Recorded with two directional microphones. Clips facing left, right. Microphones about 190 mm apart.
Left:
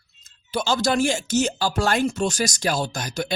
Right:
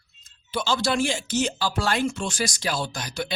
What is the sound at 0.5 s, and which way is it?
Speech, 45° left (ahead or behind).